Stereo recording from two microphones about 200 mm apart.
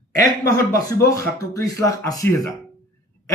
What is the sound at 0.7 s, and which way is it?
A man's voice, 15° left (ahead or behind).